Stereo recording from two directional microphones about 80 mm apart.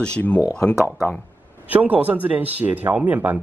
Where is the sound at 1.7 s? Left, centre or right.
Centre.